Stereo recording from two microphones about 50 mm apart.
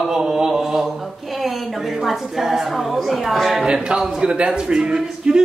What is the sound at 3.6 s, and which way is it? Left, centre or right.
Speech, centre.